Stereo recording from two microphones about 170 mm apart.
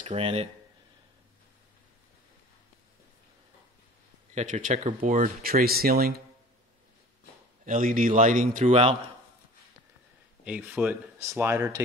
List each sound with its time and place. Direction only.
0.0 s speech: 35° right (ahead or behind)
4.4 s speech: 45° right (ahead or behind)
7.6 s speech: 55° right (ahead or behind)
10.4 s speech: 5° right (ahead or behind)